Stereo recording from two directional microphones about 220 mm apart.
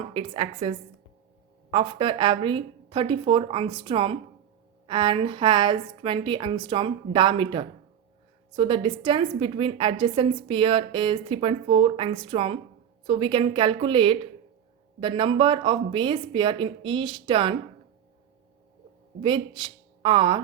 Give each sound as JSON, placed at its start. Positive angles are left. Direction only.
{"t": 0.1, "sound": "a woman's voice", "side_deg": -25}
{"t": 19.2, "sound": "a woman's voice", "side_deg": -20}